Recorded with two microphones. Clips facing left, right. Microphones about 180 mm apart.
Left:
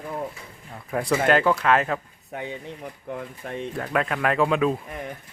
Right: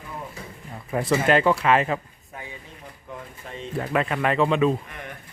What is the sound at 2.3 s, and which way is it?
Speech, 70° left (ahead or behind).